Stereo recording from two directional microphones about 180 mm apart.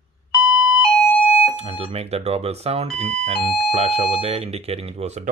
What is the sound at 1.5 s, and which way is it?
Speech, 35° right (ahead or behind).